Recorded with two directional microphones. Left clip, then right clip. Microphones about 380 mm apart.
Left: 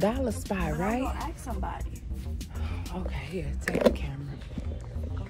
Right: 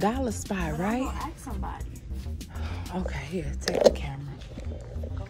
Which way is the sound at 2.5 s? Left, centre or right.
Centre.